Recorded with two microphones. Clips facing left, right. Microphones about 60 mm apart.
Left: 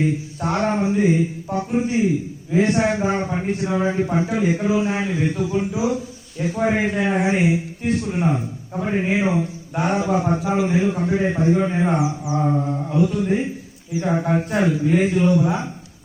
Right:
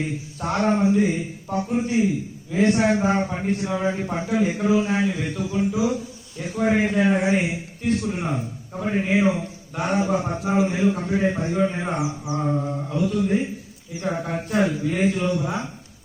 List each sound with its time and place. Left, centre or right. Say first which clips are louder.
0.0 s speech: left 6 dB; centre
4.9 s a man's voice: left 1 dB; left